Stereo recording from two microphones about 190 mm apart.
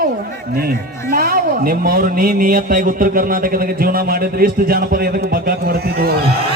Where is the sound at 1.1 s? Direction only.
50° right (ahead or behind).